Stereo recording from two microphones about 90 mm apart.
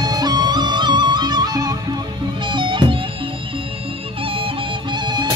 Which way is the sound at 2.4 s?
65° right (ahead or behind).